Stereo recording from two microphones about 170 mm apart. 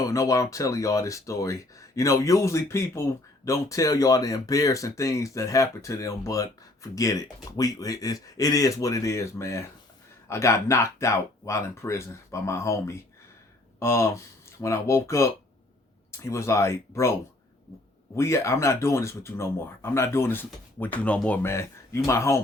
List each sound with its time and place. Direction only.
0.0 s speech: 20° left (ahead or behind)
18.2 s speech: 15° left (ahead or behind)